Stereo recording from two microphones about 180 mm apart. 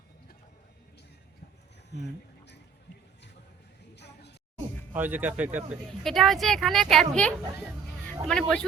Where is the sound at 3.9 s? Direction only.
70° left (ahead or behind).